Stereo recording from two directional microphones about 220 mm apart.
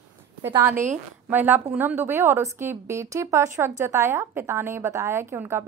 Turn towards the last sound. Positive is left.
turn(degrees=-10)  # may be behind; listen again after turning